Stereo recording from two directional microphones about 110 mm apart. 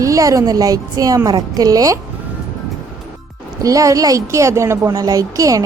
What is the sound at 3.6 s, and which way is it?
Speech, 30° right (ahead or behind).